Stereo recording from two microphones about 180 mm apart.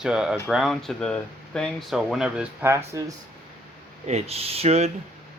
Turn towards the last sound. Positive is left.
turn(degrees=-35)  # may be behind; listen again after turning